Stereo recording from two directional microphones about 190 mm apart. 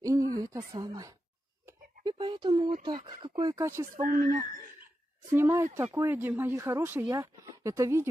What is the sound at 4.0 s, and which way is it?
Speech, 40° right (ahead or behind).